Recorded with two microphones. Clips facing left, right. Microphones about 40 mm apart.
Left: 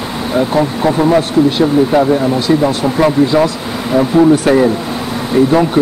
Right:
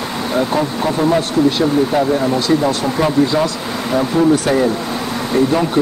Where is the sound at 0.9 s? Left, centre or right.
Left.